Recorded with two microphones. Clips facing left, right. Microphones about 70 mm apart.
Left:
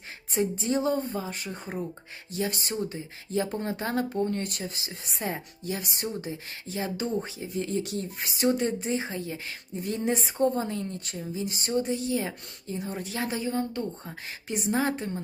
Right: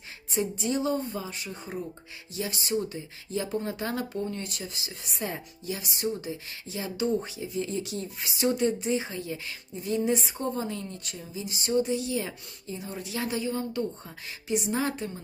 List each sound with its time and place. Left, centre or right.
0.3 s speech: left
4.3 s speech: left
5.6 s speech: left